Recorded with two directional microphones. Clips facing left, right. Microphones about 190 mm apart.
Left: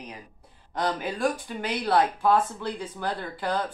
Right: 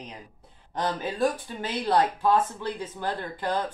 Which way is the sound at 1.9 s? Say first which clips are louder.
Even; 20° right (ahead or behind).